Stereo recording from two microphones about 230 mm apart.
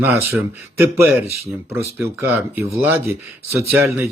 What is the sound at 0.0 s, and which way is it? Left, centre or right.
Speech, centre.